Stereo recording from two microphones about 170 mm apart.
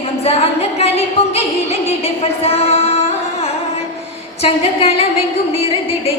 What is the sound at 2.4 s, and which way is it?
Music, 35° left (ahead or behind).